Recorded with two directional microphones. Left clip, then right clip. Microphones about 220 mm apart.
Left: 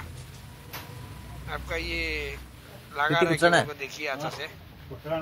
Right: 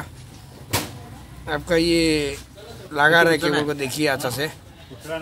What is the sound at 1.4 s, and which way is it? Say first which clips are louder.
Speech: right 12 dB; 25° left (ahead or behind).